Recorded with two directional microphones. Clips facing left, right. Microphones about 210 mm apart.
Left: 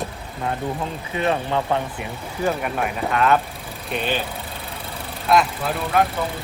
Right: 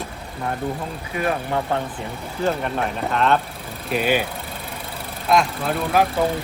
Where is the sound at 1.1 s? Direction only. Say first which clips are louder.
Left 1 dB; 25° left (ahead or behind).